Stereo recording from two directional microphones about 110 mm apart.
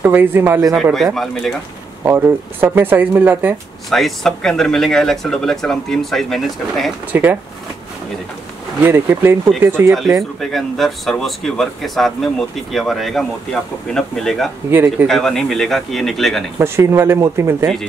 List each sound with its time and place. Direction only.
0.0 s speech: 20° right (ahead or behind)
1.1 s speech: centre (ahead or behind)
2.0 s speech: 20° right (ahead or behind)
3.9 s speech: 5° left (ahead or behind)
7.1 s speech: 15° right (ahead or behind)
8.8 s speech: 20° right (ahead or behind)
10.4 s speech: centre (ahead or behind)
14.7 s speech: 20° right (ahead or behind)
15.0 s speech: 5° left (ahead or behind)
16.5 s speech: 25° right (ahead or behind)